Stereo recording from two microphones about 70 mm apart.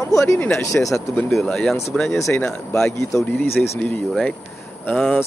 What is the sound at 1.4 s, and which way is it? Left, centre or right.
Speech, centre.